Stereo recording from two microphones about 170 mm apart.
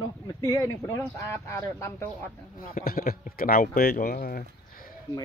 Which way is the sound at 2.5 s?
55° left (ahead or behind).